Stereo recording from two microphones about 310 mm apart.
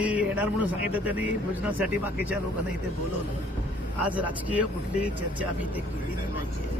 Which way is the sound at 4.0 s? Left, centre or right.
Centre.